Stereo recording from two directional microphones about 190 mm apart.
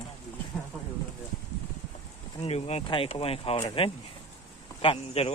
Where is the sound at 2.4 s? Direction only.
35° left (ahead or behind).